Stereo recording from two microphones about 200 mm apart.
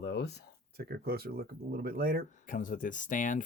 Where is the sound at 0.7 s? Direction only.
50° right (ahead or behind).